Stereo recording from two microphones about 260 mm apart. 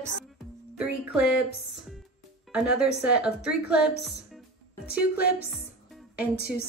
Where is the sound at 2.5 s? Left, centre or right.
Centre.